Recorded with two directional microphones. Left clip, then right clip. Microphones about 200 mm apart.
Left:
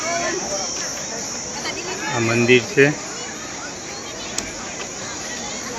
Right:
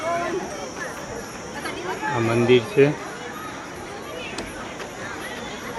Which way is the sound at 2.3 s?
Centre (ahead or behind).